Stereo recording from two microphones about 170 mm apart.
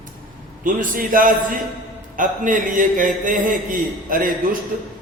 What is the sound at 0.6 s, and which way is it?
A man's voice, 55° right (ahead or behind).